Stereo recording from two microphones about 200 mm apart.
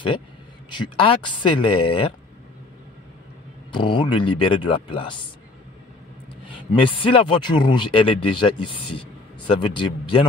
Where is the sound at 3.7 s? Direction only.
25° left (ahead or behind).